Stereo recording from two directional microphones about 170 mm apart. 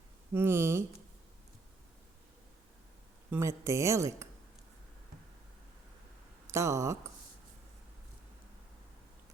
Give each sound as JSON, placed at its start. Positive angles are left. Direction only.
{"t": 0.3, "sound": "a woman's voice", "side_deg": -15}
{"t": 3.2, "sound": "a woman's voice", "side_deg": -15}
{"t": 6.5, "sound": "speech", "side_deg": -15}